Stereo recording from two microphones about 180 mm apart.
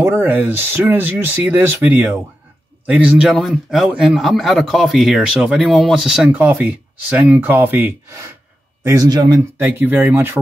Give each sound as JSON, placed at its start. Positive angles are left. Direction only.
{"t": 0.0, "sound": "a man's voice", "side_deg": -10}